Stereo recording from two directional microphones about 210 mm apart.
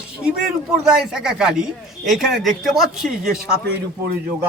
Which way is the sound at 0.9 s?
5° right (ahead or behind).